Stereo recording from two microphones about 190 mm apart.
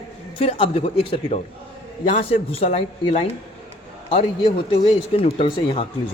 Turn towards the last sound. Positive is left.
turn(degrees=30)  # may be behind; listen again after turning